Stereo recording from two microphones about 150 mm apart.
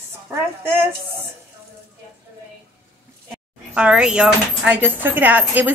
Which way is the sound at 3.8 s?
5° right (ahead or behind).